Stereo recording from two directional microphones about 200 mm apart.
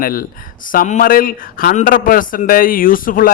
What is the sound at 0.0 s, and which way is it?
Speech, 45° left (ahead or behind).